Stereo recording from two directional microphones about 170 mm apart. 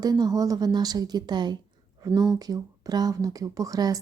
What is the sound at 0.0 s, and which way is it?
A woman's voice, 20° right (ahead or behind).